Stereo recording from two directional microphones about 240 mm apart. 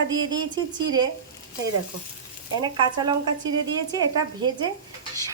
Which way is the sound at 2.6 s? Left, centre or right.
Centre.